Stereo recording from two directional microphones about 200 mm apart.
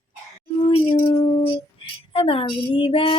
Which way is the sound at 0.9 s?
25° left (ahead or behind).